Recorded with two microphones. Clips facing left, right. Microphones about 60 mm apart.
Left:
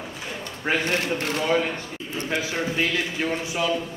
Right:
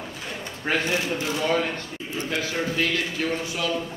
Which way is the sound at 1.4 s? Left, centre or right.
Centre.